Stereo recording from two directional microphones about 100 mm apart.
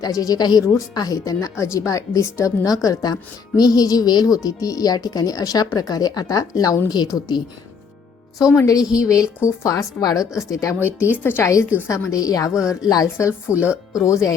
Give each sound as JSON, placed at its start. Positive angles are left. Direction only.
{"t": 0.0, "sound": "a woman's voice", "side_deg": 35}
{"t": 8.5, "sound": "speech", "side_deg": 35}
{"t": 11.2, "sound": "speech", "side_deg": 20}
{"t": 11.9, "sound": "speech", "side_deg": 30}
{"t": 12.5, "sound": "a woman's voice", "side_deg": -5}
{"t": 12.9, "sound": "speech", "side_deg": 35}